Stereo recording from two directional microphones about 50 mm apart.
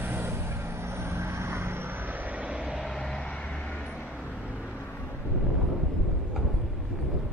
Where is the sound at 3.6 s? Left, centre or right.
Left.